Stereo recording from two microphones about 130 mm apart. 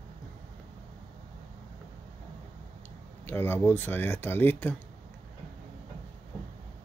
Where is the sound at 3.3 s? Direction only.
15° left (ahead or behind).